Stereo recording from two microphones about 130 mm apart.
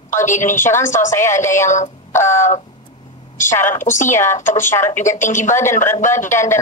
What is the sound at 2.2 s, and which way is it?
Speech, 70° left (ahead or behind).